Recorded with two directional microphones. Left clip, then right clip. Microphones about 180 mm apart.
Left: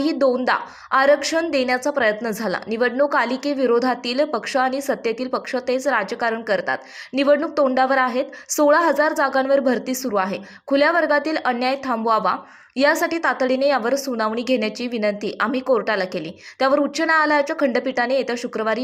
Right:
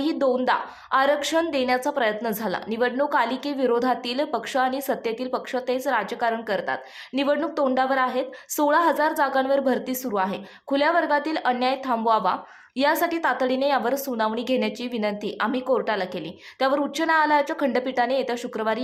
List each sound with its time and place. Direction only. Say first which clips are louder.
0.0 s a woman's voice: left 3 dB; 15° left (ahead or behind)